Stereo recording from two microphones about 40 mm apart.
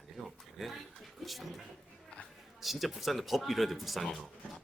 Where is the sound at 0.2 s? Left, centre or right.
Centre.